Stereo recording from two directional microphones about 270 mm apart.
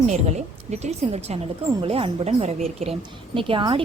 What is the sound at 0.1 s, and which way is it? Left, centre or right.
A woman's voice, right.